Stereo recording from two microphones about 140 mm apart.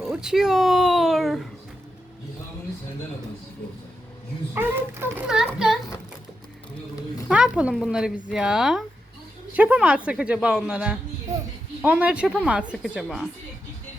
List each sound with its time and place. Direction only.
0.1 s a sound: 5° right (ahead or behind)
4.5 s a woman's voice: 15° right (ahead or behind)
5.3 s speech: 5° right (ahead or behind)
7.3 s a woman's voice: 5° right (ahead or behind)